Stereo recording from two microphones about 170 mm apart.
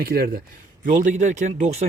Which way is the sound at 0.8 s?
50° right (ahead or behind).